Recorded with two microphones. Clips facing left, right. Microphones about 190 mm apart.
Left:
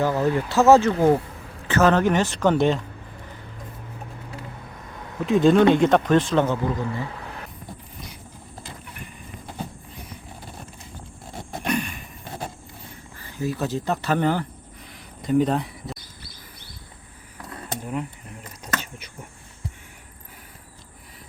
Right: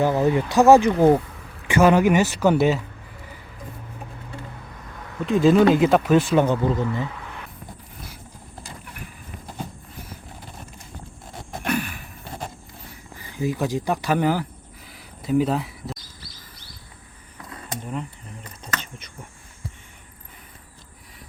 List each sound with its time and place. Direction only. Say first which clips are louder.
0.0 s speech: right 2 dB; 15° right (ahead or behind)
5.2 s a man's voice: even; centre (ahead or behind); by 6.8 s 15° right (ahead or behind)
11.6 s sigh: even; 5° right (ahead or behind)
13.1 s speech: right 2 dB; 15° right (ahead or behind)
18.6 s a sound: left 3 dB; 10° left (ahead or behind)